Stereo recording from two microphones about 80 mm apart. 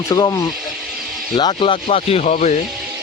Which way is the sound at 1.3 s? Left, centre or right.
Left.